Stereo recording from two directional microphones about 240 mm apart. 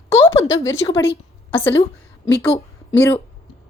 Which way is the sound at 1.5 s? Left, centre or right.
Left.